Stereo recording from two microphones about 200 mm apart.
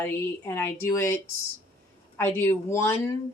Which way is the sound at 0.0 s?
10° left (ahead or behind).